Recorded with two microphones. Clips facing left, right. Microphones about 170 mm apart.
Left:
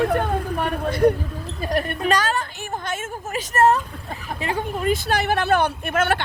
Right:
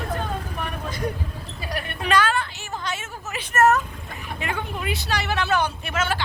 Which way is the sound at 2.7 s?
50° left (ahead or behind).